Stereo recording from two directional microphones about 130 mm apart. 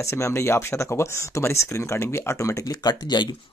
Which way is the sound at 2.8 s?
35° left (ahead or behind).